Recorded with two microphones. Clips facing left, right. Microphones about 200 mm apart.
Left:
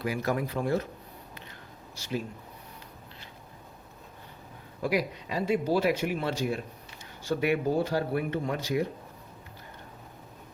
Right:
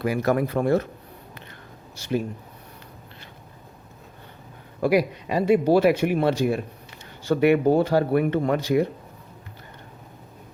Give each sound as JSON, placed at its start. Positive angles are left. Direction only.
{"t": 0.0, "sound": "speech", "side_deg": -60}
{"t": 2.0, "sound": "speech", "side_deg": -55}
{"t": 4.8, "sound": "speech", "side_deg": -65}